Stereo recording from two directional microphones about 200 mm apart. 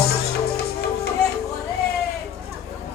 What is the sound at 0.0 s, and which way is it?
Music, 50° left (ahead or behind).